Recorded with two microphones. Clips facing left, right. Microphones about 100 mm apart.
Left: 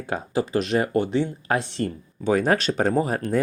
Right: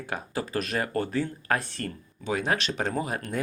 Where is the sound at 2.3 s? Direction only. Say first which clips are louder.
Left 7 dB; 45° left (ahead or behind).